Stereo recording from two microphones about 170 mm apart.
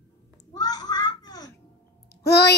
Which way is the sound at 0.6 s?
25° left (ahead or behind).